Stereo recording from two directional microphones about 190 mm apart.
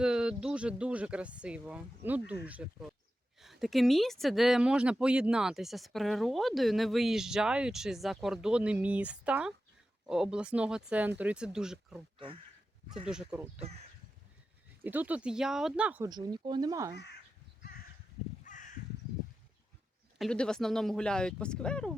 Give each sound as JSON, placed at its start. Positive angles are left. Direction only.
{"t": 0.0, "sound": "speech", "side_deg": -5}
{"t": 13.1, "sound": "speech", "side_deg": -5}
{"t": 14.8, "sound": "speech", "side_deg": -10}
{"t": 16.0, "sound": "speech", "side_deg": -20}
{"t": 17.6, "sound": "crow", "side_deg": 50}
{"t": 20.1, "sound": "speech", "side_deg": 5}